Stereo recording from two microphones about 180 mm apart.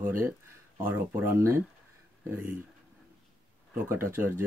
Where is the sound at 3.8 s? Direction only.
15° right (ahead or behind).